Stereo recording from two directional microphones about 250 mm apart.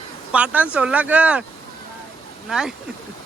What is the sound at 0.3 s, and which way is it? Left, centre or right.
Speech, centre.